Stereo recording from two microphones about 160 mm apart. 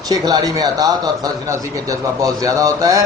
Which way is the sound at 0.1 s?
25° right (ahead or behind).